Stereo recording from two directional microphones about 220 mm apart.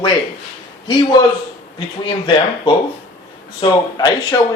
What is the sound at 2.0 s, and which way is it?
Speech, 20° left (ahead or behind).